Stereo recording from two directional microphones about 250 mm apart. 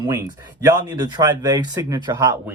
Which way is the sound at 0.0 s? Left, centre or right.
Centre.